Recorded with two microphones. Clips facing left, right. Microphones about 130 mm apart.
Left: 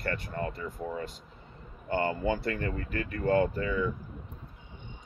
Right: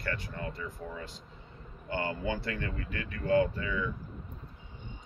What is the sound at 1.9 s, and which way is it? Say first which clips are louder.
Speech: left 5 dB; 45° left (ahead or behind).